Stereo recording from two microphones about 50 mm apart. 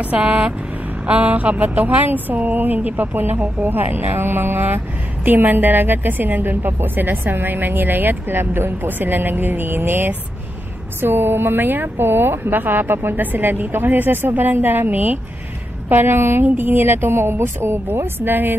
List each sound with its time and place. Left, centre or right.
0.2 s vehicle: right
1.0 s speech: right
15.9 s speech: right
16.4 s speech: right